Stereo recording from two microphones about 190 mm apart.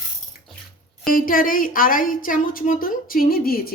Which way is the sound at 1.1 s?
45° left (ahead or behind).